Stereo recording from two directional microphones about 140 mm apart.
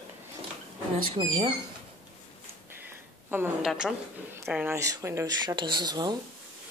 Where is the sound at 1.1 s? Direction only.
40° right (ahead or behind).